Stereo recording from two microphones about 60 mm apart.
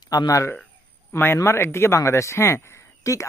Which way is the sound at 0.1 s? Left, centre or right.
Left.